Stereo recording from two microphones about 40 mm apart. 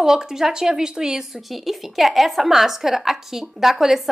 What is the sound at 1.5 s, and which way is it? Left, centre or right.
A woman's voice, centre.